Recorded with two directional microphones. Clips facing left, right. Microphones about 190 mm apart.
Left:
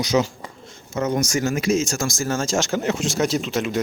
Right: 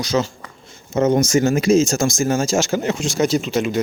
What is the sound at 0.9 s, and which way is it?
Speech, 25° right (ahead or behind).